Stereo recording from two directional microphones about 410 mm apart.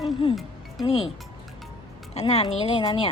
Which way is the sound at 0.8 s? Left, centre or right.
Centre.